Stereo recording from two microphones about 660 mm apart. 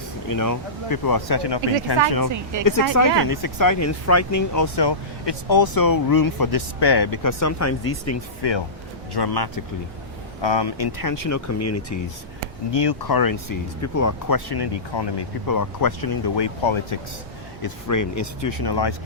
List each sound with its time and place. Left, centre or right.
0.3 s speech: left
2.3 s speech: right
3.2 s speech: left
8.4 s speech: left
12.7 s speech: left
17.6 s speech: left